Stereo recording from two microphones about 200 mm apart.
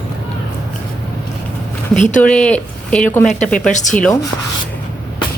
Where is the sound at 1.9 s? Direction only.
40° left (ahead or behind).